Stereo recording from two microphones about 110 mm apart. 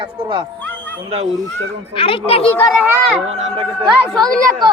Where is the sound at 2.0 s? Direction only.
60° left (ahead or behind).